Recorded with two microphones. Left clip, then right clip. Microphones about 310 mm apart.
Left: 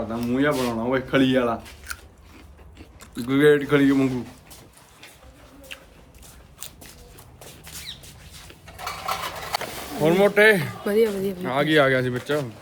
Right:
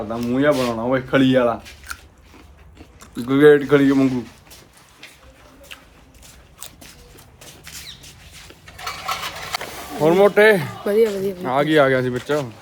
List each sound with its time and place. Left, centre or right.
0.1 s speech: centre
3.0 s speech: centre
8.6 s a sound: left
9.6 s vehicle: centre
10.0 s speech: centre
10.8 s speech: centre
11.4 s speech: centre